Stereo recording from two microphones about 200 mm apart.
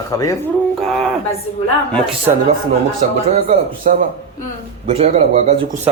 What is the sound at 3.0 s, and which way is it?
Speech, 40° right (ahead or behind).